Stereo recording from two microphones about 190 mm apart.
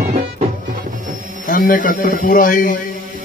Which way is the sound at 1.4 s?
45° left (ahead or behind).